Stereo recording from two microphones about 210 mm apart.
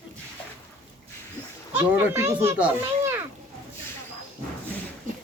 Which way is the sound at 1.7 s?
10° right (ahead or behind).